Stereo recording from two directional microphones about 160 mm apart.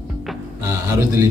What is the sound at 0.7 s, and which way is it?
Speech, 20° right (ahead or behind).